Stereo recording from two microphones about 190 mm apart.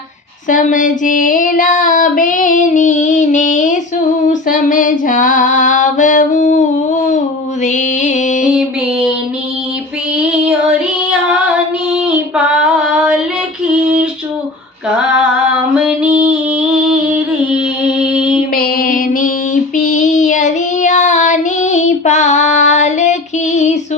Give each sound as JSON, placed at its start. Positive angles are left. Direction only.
{"t": 0.4, "sound": "child singing", "side_deg": 40}
{"t": 4.3, "sound": "female singing", "side_deg": 45}
{"t": 7.6, "sound": "music", "side_deg": 40}
{"t": 8.4, "sound": "child singing", "side_deg": -5}
{"t": 10.2, "sound": "child singing", "side_deg": -5}
{"t": 12.0, "sound": "child singing", "side_deg": -5}
{"t": 14.8, "sound": "female singing", "side_deg": -5}
{"t": 15.7, "sound": "music", "side_deg": -5}
{"t": 18.5, "sound": "music", "side_deg": 50}
{"t": 19.7, "sound": "child singing", "side_deg": 40}